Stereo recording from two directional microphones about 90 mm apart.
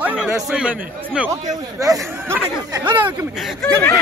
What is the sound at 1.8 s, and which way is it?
Speech, 40° right (ahead or behind).